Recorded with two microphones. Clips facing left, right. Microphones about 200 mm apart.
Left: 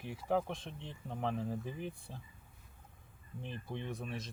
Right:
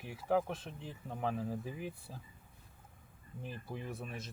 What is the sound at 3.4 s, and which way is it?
Speech, 5° right (ahead or behind).